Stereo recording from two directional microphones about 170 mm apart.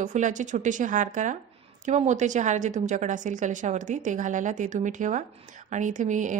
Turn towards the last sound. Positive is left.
turn(degrees=-45)  # may be behind; listen again after turning